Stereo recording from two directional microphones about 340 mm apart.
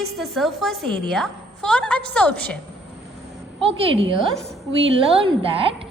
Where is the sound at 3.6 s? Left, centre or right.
Centre.